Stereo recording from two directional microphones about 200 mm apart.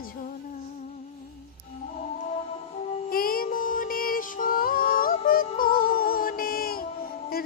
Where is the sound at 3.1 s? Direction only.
45° left (ahead or behind).